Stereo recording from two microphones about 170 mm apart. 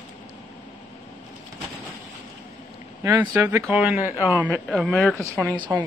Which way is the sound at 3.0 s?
20° right (ahead or behind).